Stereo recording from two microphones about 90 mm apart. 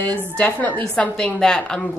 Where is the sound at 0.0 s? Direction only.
15° left (ahead or behind).